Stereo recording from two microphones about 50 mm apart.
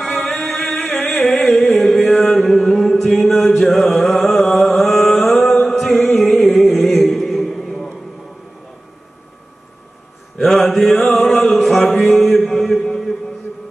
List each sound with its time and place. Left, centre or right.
0.5 s music: centre
7.1 s mantra: centre
10.4 s mantra: centre